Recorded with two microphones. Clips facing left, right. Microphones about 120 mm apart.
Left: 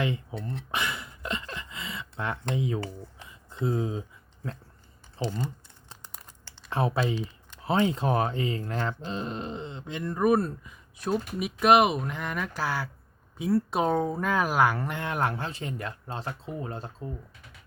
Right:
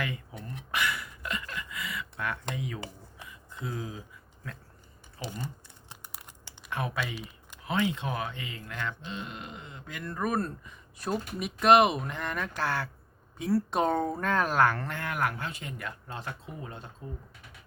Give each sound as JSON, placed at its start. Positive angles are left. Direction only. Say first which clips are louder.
{"t": 0.0, "sound": "speech", "louder": "left 6 dB", "side_deg": 25}
{"t": 0.7, "sound": "a sound", "louder": "right 2 dB", "side_deg": 25}
{"t": 5.2, "sound": "speech", "louder": "left 8 dB", "side_deg": -10}
{"t": 5.9, "sound": "crumpling", "louder": "even", "side_deg": -10}
{"t": 6.7, "sound": "speech", "louder": "left 6 dB", "side_deg": 30}